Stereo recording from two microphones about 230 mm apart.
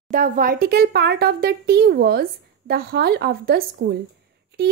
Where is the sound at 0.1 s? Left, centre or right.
Right.